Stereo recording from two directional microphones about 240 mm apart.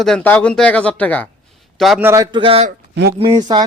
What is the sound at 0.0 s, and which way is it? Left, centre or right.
Speech, centre.